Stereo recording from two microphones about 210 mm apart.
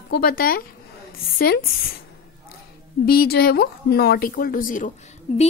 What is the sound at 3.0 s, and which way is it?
A woman's voice, 45° left (ahead or behind).